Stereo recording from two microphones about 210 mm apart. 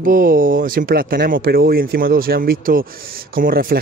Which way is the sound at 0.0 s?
40° right (ahead or behind).